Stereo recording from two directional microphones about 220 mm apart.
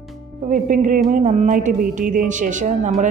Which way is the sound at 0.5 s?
35° right (ahead or behind).